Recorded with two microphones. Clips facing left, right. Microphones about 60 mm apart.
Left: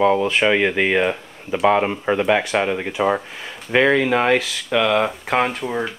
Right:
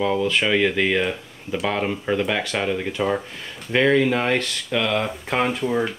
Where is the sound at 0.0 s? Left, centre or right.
Left.